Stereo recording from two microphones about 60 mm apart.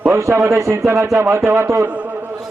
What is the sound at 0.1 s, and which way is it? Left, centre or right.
Speech, right.